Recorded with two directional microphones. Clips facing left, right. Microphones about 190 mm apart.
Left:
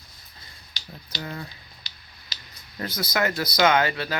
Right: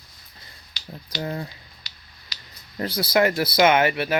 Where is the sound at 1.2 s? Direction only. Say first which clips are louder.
Right 6 dB; 30° right (ahead or behind).